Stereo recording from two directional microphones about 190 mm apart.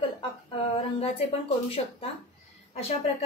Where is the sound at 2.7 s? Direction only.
30° left (ahead or behind).